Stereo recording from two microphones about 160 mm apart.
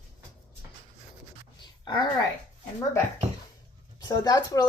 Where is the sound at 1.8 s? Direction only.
25° left (ahead or behind).